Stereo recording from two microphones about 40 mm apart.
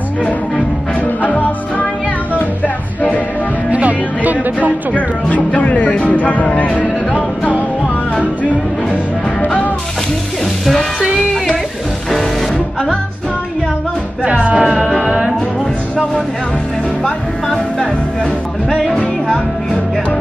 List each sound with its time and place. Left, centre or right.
1.2 s music: left
3.7 s music: right
5.5 s music: left
14.3 s music: right
15.0 s music: centre
17.0 s music: centre